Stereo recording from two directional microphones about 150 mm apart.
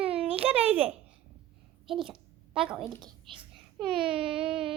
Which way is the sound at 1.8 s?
Centre (ahead or behind).